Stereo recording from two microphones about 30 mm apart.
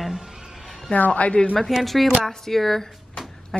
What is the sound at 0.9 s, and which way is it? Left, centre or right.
Speech, left.